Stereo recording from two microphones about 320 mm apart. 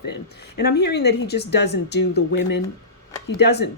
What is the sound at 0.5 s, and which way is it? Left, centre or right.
Speech, left.